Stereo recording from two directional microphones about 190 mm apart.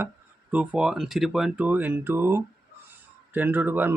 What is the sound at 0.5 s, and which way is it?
Speech, 5° right (ahead or behind).